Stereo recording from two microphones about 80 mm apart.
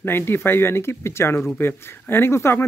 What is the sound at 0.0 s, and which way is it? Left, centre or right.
Speech, left.